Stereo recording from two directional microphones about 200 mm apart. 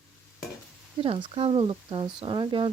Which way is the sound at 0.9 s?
25° right (ahead or behind).